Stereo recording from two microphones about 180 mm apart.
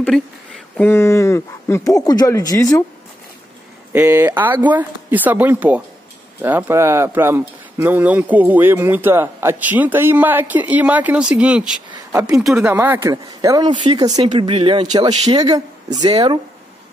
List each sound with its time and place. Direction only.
0.1 s speech: centre (ahead or behind)
0.7 s speech: 10° left (ahead or behind)
3.9 s speech: 10° right (ahead or behind)
11.9 s a sound: 20° right (ahead or behind)
12.3 s speech: 5° right (ahead or behind); by 16.3 s 20° right (ahead or behind)